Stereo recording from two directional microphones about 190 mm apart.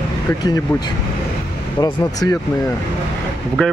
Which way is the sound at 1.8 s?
20° left (ahead or behind).